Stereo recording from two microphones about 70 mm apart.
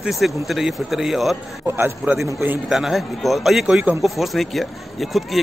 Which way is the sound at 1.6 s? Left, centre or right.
Right.